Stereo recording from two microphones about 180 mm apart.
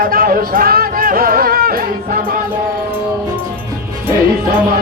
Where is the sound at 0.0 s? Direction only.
55° right (ahead or behind).